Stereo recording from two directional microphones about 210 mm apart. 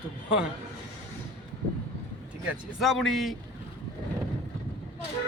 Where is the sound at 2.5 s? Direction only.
Centre (ahead or behind).